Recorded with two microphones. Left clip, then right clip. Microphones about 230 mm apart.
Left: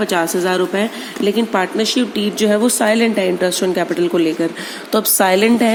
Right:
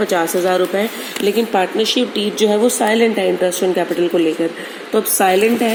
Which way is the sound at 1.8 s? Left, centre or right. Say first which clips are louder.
Right 1 dB; left.